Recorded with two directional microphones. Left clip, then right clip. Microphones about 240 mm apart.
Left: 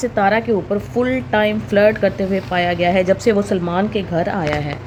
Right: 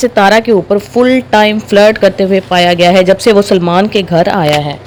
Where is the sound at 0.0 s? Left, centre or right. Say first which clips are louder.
Right 9 dB; right.